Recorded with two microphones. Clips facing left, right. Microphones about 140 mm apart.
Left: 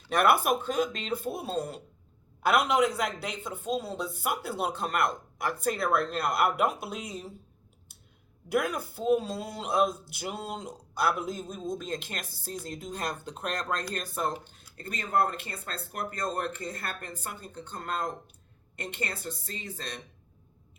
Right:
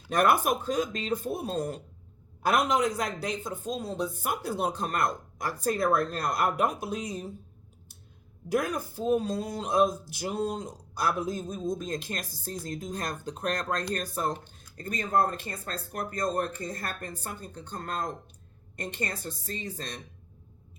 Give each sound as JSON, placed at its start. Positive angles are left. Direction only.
{"t": 0.2, "sound": "speech", "side_deg": -40}
{"t": 8.4, "sound": "speech", "side_deg": -40}